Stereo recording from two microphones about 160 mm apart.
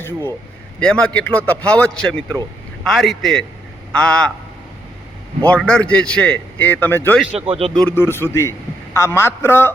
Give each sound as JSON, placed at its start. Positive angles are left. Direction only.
{"t": 0.0, "sound": "a man's voice", "side_deg": 15}
{"t": 5.4, "sound": "a man's voice", "side_deg": 5}
{"t": 7.4, "sound": "speech", "side_deg": -35}
{"t": 7.8, "sound": "a man's voice", "side_deg": 10}